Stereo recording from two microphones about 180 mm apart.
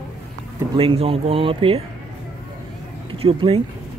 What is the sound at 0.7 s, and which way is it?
Speech, 30° right (ahead or behind).